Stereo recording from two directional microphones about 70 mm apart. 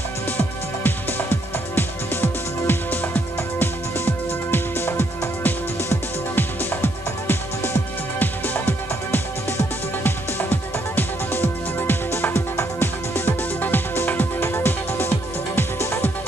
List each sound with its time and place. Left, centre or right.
0.8 s music: left